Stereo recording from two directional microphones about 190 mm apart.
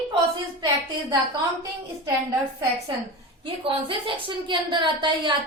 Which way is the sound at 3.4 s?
30° right (ahead or behind).